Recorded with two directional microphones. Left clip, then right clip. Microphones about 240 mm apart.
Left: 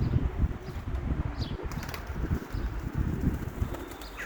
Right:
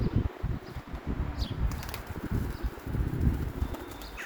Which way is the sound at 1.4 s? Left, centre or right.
Right.